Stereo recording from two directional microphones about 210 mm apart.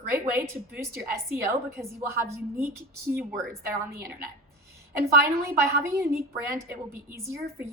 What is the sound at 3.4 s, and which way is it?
Speech, 50° right (ahead or behind).